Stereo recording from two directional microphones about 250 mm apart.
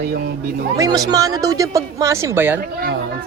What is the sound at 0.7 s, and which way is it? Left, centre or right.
Speech, centre.